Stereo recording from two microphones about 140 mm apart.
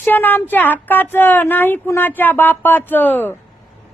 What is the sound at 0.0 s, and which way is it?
A woman's voice, 15° left (ahead or behind).